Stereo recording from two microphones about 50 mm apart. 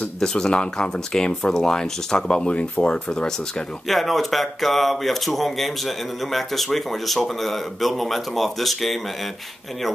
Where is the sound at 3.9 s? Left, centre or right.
Centre.